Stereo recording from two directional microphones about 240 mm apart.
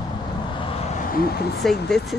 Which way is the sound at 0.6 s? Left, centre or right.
Left.